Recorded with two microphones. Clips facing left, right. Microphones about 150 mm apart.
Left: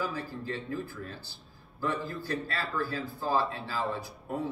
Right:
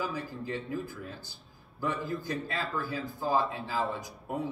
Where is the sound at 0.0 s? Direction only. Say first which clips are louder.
Even; 15° right (ahead or behind).